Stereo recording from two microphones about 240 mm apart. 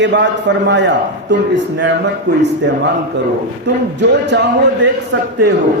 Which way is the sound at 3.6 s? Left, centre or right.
Right.